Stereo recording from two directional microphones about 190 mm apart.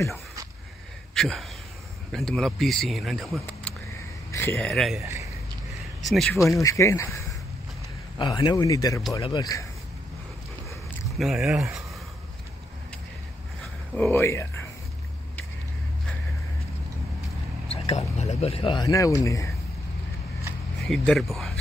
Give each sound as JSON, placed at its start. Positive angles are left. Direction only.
{"t": 1.1, "sound": "speech", "side_deg": 0}
{"t": 4.6, "sound": "speech", "side_deg": 0}
{"t": 5.0, "sound": "a sound", "side_deg": -15}
{"t": 6.0, "sound": "speech", "side_deg": 0}
{"t": 6.5, "sound": "speech", "side_deg": 15}
{"t": 8.2, "sound": "speech", "side_deg": 20}
{"t": 11.1, "sound": "speech", "side_deg": 0}
{"t": 13.9, "sound": "speech", "side_deg": 10}
{"t": 17.6, "sound": "speech", "side_deg": 35}
{"t": 20.8, "sound": "speech", "side_deg": 5}